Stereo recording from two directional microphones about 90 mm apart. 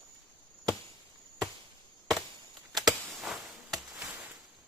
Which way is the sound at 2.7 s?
Centre (ahead or behind).